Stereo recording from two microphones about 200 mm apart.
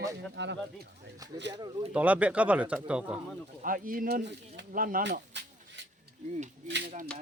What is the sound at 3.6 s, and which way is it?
Speech, 45° right (ahead or behind).